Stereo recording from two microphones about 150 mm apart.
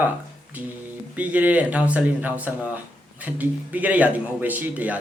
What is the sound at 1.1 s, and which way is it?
Speech, 10° right (ahead or behind).